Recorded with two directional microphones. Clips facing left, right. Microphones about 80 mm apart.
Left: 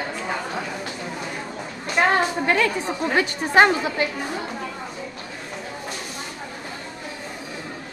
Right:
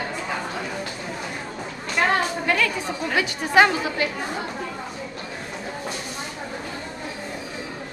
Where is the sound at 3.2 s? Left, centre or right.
Left.